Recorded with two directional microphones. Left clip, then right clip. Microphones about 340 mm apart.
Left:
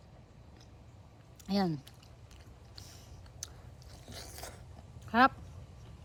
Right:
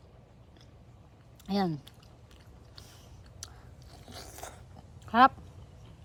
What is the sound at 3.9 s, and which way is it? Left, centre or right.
Biting, centre.